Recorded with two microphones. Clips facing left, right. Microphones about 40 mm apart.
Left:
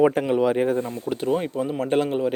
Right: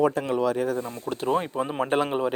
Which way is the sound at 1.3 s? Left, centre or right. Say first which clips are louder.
Even; centre.